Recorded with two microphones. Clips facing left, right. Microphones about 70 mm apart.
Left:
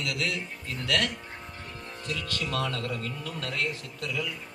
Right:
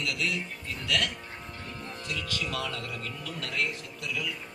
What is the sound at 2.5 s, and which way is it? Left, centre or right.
Speech, left.